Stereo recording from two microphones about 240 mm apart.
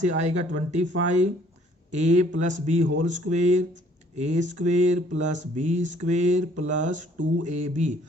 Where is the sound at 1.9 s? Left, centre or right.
Right.